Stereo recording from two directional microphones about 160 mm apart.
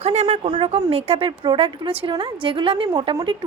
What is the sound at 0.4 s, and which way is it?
A woman's voice, 30° right (ahead or behind).